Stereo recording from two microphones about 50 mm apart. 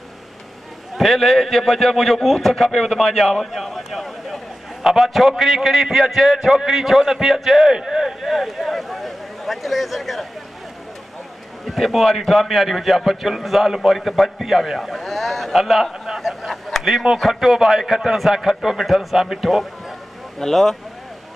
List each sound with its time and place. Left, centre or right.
0.9 s a man's voice: centre
11.6 s a man's voice: centre
20.3 s speech: centre